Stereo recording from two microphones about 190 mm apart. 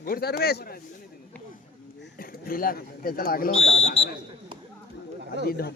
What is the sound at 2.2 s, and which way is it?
Bird, 50° left (ahead or behind).